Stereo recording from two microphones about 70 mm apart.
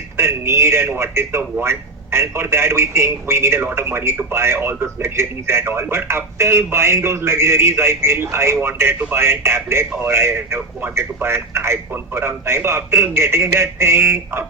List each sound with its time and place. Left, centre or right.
0.2 s speech: right